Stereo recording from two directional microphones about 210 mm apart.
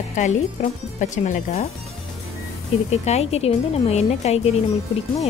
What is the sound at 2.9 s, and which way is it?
Speech, 30° left (ahead or behind).